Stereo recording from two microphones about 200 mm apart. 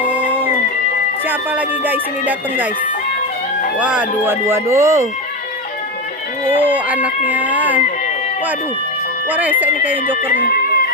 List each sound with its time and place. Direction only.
0.1 s cat: 10° right (ahead or behind)
1.3 s speech: 10° right (ahead or behind)
3.8 s speech: 5° right (ahead or behind)
6.6 s speech: 10° right (ahead or behind)
9.3 s speech: 10° right (ahead or behind)
10.2 s music: 50° left (ahead or behind)